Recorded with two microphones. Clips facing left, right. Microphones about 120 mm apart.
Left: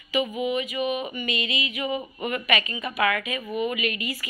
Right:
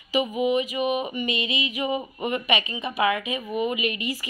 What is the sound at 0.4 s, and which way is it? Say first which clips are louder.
A woman's voice: right 3 dB; 35° right (ahead or behind).